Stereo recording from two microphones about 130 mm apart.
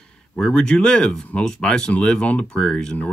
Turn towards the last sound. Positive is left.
turn(degrees=10)  # may be behind; listen again after turning